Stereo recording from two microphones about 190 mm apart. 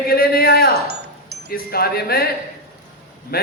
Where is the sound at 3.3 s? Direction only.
50° left (ahead or behind).